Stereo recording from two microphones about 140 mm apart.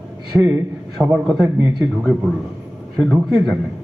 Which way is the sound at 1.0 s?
15° right (ahead or behind).